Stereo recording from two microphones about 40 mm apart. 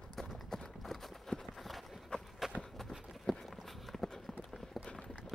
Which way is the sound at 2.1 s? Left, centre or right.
Left.